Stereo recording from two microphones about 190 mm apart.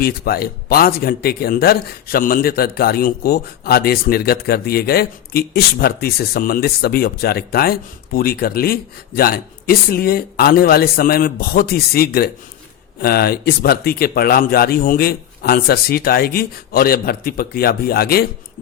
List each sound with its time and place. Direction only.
0.0 s speech: 55° left (ahead or behind)